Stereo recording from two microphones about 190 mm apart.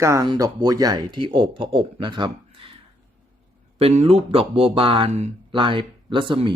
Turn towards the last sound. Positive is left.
turn(degrees=-25)  # may be behind; listen again after turning